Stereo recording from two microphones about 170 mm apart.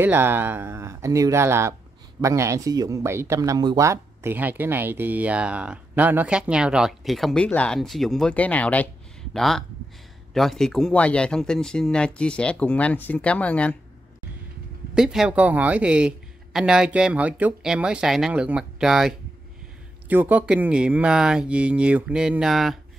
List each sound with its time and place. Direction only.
0.0 s speech: 10° right (ahead or behind); by 13.7 s 10° left (ahead or behind)
15.0 s speech: 5° right (ahead or behind)